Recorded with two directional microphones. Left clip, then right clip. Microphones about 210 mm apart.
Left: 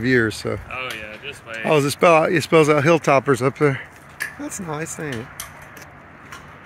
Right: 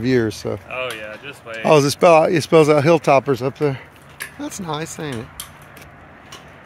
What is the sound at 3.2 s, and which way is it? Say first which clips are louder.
Speech: left 1 dB; centre (ahead or behind).